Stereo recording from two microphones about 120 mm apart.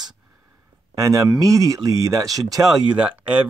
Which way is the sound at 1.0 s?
30° right (ahead or behind).